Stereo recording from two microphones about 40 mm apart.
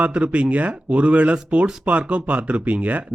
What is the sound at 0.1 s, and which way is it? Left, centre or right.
A man's voice, right.